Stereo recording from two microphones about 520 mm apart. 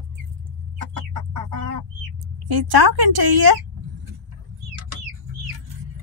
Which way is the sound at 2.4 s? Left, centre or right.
Right.